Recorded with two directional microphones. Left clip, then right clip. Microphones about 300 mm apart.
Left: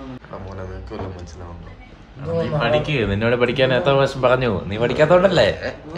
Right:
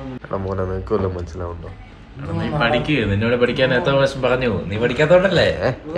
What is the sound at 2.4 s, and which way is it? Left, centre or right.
Speech, left.